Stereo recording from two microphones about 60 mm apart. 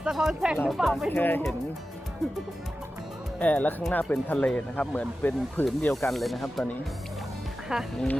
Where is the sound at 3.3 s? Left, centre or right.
Left.